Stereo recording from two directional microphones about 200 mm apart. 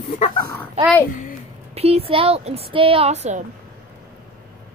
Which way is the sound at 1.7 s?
30° right (ahead or behind).